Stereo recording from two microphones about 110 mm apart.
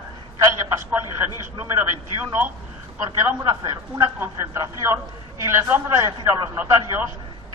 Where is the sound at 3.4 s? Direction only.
30° right (ahead or behind).